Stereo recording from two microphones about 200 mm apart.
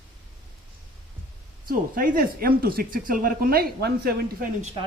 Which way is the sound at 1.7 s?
45° right (ahead or behind).